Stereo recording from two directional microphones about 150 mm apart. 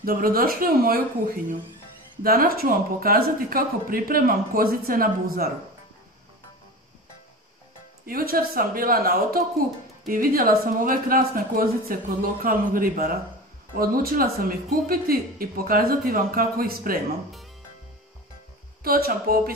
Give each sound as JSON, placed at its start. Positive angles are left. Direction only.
{"t": 0.0, "sound": "speech", "side_deg": -75}
{"t": 8.0, "sound": "speech", "side_deg": -80}
{"t": 18.8, "sound": "speech", "side_deg": -80}